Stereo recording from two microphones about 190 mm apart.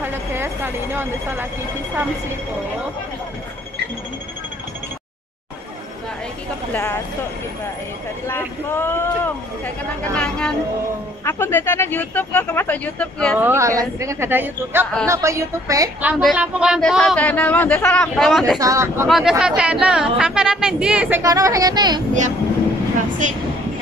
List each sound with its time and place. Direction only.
0.0 s speech: 10° right (ahead or behind)
6.7 s speech: 10° left (ahead or behind)
8.3 s speech: 10° left (ahead or behind)
13.4 s a woman's voice: 15° right (ahead or behind)
18.6 s a woman's voice: 15° right (ahead or behind)
19.0 s speech: centre (ahead or behind)
21.2 s speech: 20° right (ahead or behind)
23.2 s a woman's voice: 40° right (ahead or behind)